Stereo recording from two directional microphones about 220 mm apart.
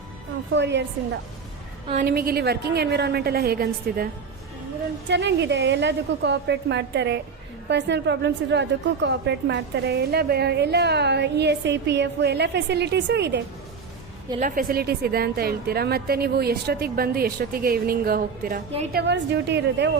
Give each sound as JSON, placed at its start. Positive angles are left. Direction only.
{"t": 0.5, "sound": "a woman's voice", "side_deg": -55}
{"t": 2.0, "sound": "a woman's voice", "side_deg": -45}
{"t": 14.3, "sound": "a woman's voice", "side_deg": -35}